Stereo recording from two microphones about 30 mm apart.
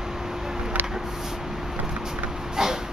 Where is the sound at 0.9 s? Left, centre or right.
Centre.